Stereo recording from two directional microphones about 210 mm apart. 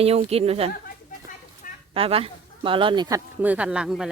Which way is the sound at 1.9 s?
25° right (ahead or behind).